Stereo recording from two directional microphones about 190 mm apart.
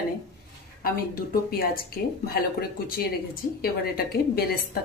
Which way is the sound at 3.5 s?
50° left (ahead or behind).